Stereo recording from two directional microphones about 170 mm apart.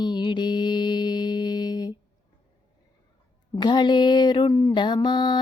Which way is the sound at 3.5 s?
25° left (ahead or behind).